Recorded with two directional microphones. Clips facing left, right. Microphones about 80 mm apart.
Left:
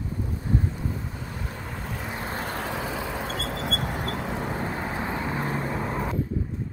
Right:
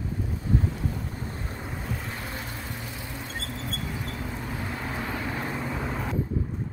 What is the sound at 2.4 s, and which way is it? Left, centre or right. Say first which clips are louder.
Vehicle: left 7 dB; left.